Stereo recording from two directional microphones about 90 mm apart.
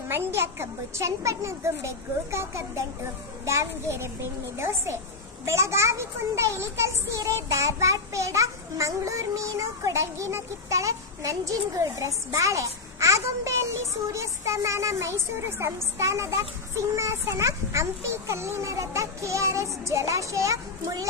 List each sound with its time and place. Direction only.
0.3 s a child's voice: 30° right (ahead or behind)